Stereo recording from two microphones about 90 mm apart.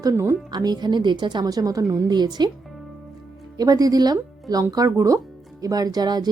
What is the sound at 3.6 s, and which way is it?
Speech, 45° right (ahead or behind).